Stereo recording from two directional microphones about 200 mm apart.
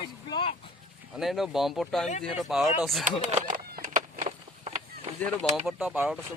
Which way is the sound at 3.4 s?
40° right (ahead or behind).